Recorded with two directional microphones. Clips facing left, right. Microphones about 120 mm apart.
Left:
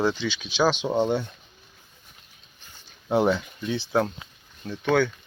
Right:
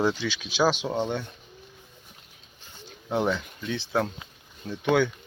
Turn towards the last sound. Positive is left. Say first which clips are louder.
# left 1 dB
turn(degrees=-15)  # may be behind; listen again after turning